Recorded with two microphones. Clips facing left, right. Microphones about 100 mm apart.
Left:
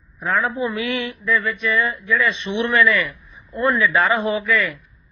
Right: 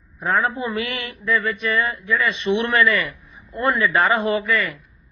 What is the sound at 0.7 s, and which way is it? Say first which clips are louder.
Mantra: left 3 dB; 50° right (ahead or behind).